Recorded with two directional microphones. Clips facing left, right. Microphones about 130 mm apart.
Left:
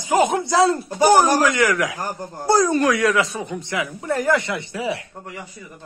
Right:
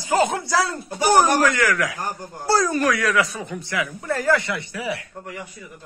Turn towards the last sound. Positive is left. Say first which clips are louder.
# left 2 dB
turn(degrees=25)  # may be behind; listen again after turning